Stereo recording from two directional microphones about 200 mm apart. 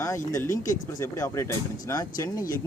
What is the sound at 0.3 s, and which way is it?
Speech, 15° left (ahead or behind).